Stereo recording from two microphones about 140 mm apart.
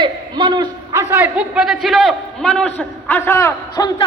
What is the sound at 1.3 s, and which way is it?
A man's voice, 5° right (ahead or behind).